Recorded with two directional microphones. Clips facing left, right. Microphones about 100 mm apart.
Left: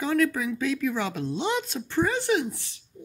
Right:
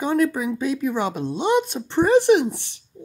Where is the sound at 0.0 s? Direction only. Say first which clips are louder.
Right 4 dB; 25° right (ahead or behind).